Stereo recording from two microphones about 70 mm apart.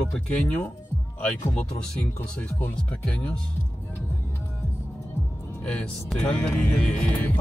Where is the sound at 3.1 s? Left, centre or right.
Centre.